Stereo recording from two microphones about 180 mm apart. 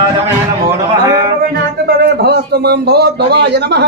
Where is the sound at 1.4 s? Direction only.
60° right (ahead or behind).